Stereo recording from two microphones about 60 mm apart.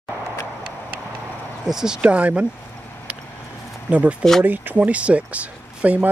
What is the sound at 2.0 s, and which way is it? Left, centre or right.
Speech, right.